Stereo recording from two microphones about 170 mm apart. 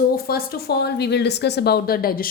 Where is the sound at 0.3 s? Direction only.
65° left (ahead or behind).